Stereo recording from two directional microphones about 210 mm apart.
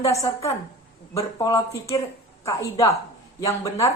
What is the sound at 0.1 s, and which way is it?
Speech, 30° left (ahead or behind).